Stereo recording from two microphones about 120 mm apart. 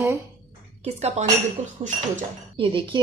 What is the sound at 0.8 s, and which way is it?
Speech, 65° right (ahead or behind).